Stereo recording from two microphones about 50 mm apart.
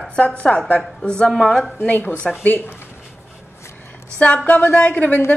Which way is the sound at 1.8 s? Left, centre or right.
Left.